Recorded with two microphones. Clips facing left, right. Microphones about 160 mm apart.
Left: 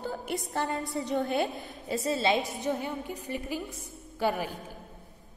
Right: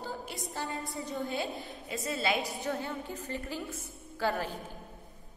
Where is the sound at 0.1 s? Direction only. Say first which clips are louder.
Left 7 dB; 60° left (ahead or behind).